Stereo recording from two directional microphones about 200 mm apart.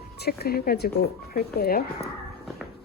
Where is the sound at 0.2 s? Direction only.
50° left (ahead or behind).